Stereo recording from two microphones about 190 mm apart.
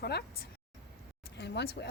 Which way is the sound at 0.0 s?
60° left (ahead or behind).